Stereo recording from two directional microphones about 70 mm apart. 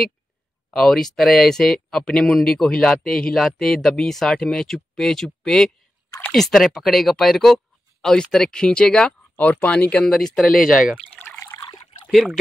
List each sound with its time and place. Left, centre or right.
0.7 s speech: centre
10.0 s speech: centre
11.5 s a sound: left
12.1 s speech: centre